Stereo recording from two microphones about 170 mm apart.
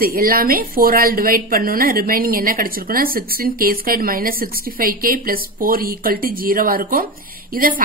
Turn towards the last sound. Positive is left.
turn(degrees=-55)  # may be behind; listen again after turning